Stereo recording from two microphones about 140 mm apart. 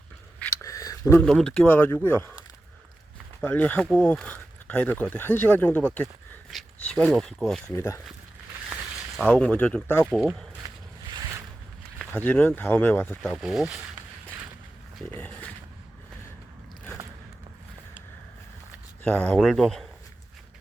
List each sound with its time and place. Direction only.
0.6 s a sound: 25° left (ahead or behind)
1.2 s speech: 5° left (ahead or behind)
3.4 s speech: 10° left (ahead or behind)
7.7 s speech: 20° left (ahead or behind)
9.1 s speech: 10° left (ahead or behind)
10.6 s boat: 30° right (ahead or behind)
11.9 s speech: 10° left (ahead or behind)
13.4 s speech: 5° right (ahead or behind)
15.1 s a sound: 10° left (ahead or behind)
19.0 s speech: 10° left (ahead or behind)